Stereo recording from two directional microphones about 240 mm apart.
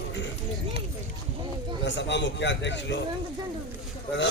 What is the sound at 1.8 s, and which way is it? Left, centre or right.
A man's voice, left.